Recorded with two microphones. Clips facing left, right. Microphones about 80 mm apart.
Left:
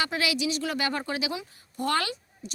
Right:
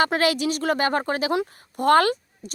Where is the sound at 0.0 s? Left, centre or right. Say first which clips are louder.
Right 7 dB; right.